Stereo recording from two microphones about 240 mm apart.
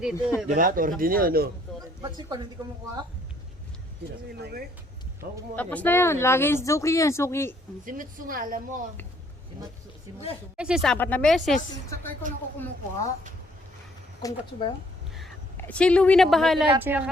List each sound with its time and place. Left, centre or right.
0.0 s speech: centre
0.4 s speech: right
2.0 s speech: centre
4.4 s speech: right
5.5 s speech: centre
7.9 s speech: right
10.6 s speech: centre
10.9 s speech: centre
14.2 s speech: centre
15.1 s speech: centre